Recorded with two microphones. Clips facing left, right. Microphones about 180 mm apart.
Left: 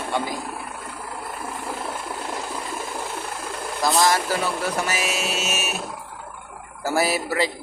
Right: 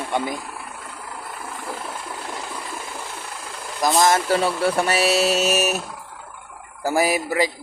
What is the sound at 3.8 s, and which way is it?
Music, 20° right (ahead or behind).